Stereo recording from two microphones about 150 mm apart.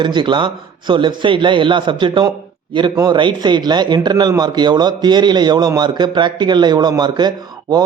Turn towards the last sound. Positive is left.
turn(degrees=-30)  # may be behind; listen again after turning